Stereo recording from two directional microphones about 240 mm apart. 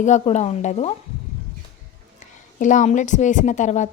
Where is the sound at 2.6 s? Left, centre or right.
Left.